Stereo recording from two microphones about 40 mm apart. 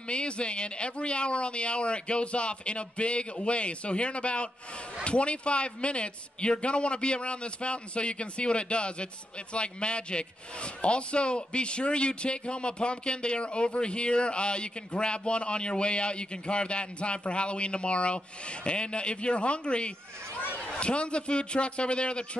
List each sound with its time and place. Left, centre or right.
0.1 s speech: left
20.3 s a sound: left
20.8 s speech: left